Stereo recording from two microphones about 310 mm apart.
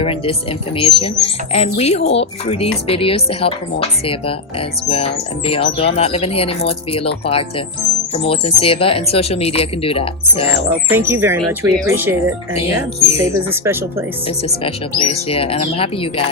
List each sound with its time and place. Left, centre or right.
0.0 s speech: centre
10.9 s speech: centre
12.5 s speech: centre
13.1 s speech: centre
14.6 s speech: centre